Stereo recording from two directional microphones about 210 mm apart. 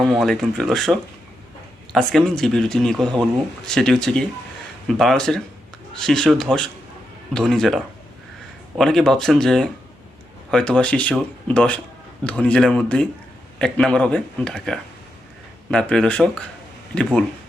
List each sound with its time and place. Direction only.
0.0 s a man's voice: centre (ahead or behind)